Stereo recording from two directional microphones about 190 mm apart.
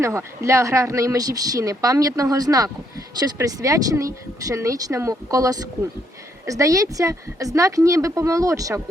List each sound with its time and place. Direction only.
0.0 s speech: 15° right (ahead or behind)